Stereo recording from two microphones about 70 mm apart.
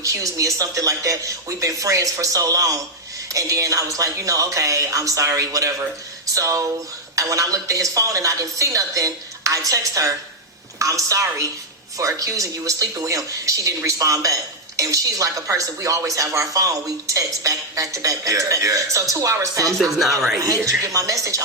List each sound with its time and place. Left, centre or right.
0.0 s speech: right
19.8 s speech: centre
20.8 s speech: right